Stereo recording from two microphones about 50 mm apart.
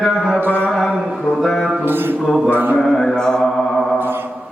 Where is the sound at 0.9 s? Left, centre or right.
Centre.